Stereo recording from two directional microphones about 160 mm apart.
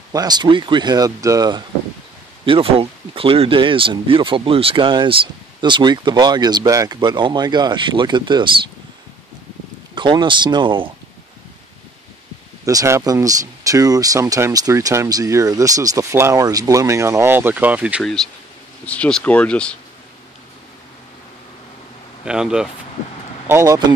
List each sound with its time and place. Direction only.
0.1 s speech: 25° right (ahead or behind)
2.4 s speech: 35° right (ahead or behind)
9.9 s speech: 30° right (ahead or behind)
12.6 s speech: 20° right (ahead or behind)
18.0 s speech: 5° left (ahead or behind)
22.2 s speech: 5° right (ahead or behind)
23.4 s speech: 15° right (ahead or behind)